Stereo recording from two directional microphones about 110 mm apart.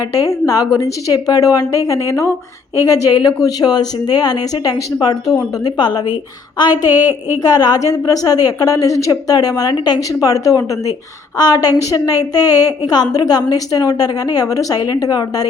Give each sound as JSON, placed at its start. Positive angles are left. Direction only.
{"t": 0.2, "sound": "a woman's voice", "side_deg": 35}
{"t": 6.9, "sound": "a woman's voice", "side_deg": -15}
{"t": 7.4, "sound": "a woman's voice", "side_deg": 35}